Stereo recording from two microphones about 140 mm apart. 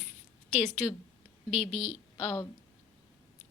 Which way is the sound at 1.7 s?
55° right (ahead or behind).